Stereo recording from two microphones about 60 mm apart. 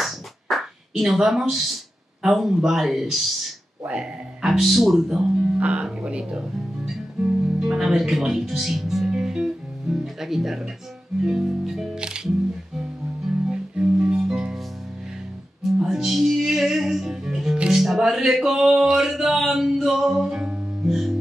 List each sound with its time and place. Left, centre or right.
0.0 s a sound: centre
2.2 s speech: centre
3.8 s speech: right
4.4 s speech: centre
5.3 s music: centre
7.6 s speech: centre
11.2 s music: centre
13.5 s music: centre
15.8 s music: centre